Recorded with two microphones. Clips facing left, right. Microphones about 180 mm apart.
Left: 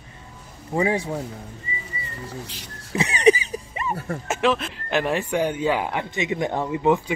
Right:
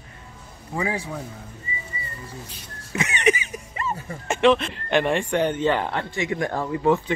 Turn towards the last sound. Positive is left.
turn(degrees=15)  # may be behind; listen again after turning